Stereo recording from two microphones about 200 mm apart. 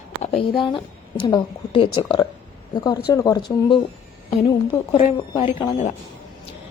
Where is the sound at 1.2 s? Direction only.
25° left (ahead or behind).